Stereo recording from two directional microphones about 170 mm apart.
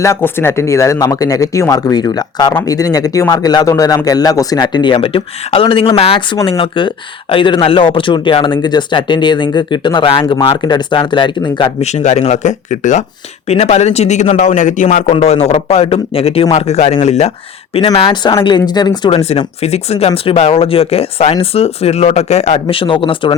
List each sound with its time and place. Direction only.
0.0 s speech: 15° left (ahead or behind)
11.8 s speech: 40° left (ahead or behind)